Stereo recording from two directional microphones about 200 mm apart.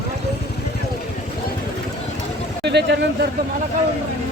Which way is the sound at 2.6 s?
60° right (ahead or behind).